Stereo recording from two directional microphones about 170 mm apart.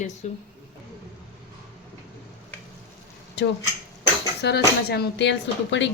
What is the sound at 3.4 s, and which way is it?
Speech, 80° left.